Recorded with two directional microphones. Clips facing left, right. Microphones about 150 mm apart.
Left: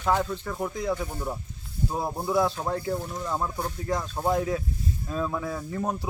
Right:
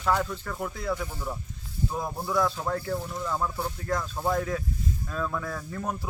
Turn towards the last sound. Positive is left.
turn(degrees=20)  # may be behind; listen again after turning